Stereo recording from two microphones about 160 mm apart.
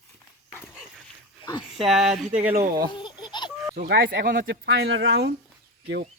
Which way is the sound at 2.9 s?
30° left (ahead or behind).